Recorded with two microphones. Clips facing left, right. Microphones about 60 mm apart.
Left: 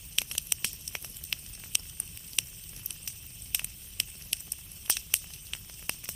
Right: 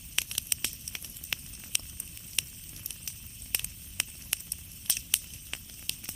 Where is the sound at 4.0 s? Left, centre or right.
Centre.